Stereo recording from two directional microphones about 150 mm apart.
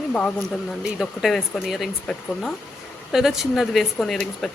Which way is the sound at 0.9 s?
Centre (ahead or behind).